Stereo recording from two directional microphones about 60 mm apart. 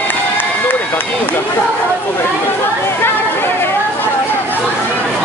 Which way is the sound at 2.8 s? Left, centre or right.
Left.